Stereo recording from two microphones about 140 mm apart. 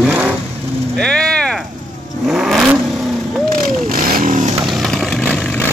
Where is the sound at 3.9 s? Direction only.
90° right; by 4.5 s 75° right (ahead or behind).